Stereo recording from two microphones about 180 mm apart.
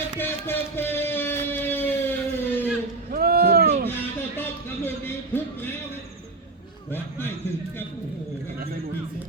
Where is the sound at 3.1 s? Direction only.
60° right (ahead or behind).